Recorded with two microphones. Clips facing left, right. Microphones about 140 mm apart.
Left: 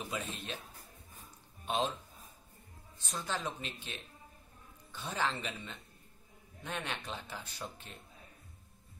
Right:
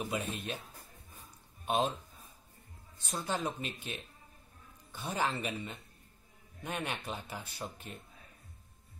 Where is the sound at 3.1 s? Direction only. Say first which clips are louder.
Right 3 dB; 15° right (ahead or behind).